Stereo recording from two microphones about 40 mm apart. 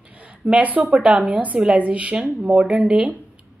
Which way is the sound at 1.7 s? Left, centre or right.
Right.